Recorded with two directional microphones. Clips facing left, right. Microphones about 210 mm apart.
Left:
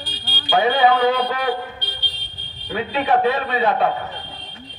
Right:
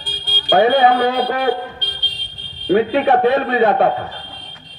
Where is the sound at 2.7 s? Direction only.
50° right (ahead or behind).